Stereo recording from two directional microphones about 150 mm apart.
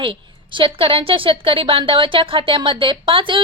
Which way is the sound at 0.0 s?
35° right (ahead or behind).